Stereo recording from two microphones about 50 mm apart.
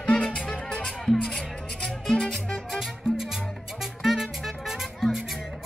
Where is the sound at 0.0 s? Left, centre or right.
Centre.